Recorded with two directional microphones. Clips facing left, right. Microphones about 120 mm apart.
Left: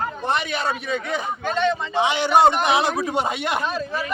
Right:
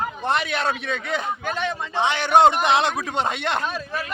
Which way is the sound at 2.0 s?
10° left (ahead or behind).